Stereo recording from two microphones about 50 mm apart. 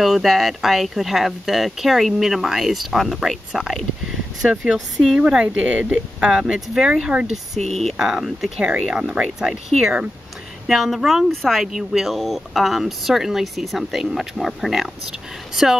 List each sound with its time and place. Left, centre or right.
0.0 s speech: centre
4.7 s speech: centre
5.3 s speech: right
7.6 s speech: centre
8.0 s speech: centre
8.5 s speech: centre